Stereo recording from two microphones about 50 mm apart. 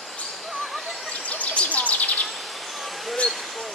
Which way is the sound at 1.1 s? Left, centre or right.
Left.